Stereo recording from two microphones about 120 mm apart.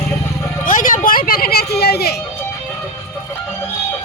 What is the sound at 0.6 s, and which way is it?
Vehicle, 90° left.